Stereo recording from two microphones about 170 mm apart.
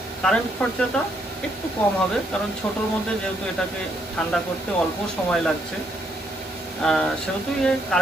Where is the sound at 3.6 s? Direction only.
5° left (ahead or behind).